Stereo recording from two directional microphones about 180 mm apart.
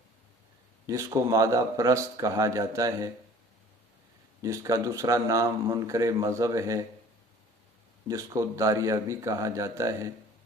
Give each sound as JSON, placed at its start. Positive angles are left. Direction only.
{"t": 0.9, "sound": "speech", "side_deg": -20}
{"t": 4.4, "sound": "speech", "side_deg": -20}
{"t": 8.0, "sound": "speech", "side_deg": -15}